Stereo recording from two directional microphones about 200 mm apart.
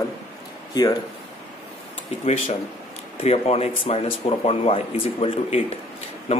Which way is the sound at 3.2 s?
30° left (ahead or behind).